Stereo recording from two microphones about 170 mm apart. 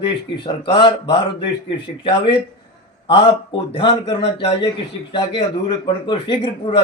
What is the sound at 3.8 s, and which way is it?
A man's voice, 30° left (ahead or behind).